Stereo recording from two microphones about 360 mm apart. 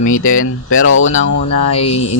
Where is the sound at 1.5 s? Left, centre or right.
Centre.